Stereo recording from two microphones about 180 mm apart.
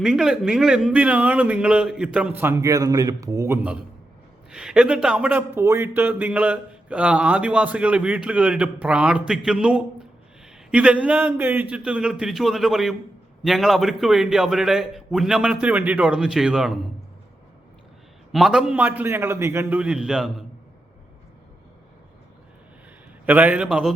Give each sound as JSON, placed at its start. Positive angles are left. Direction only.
{"t": 0.0, "sound": "a man's voice", "side_deg": -5}
{"t": 18.3, "sound": "a man's voice", "side_deg": 0}
{"t": 23.2, "sound": "speech", "side_deg": -10}